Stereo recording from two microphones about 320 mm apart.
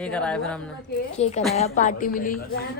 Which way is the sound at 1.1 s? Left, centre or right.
Centre.